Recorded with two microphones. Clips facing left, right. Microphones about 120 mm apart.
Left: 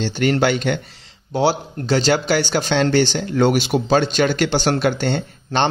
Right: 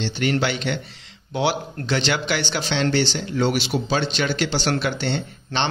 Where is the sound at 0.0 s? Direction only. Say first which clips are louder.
Left 5 dB; 45° left (ahead or behind).